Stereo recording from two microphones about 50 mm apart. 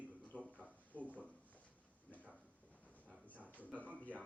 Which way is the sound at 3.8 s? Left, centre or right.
Left.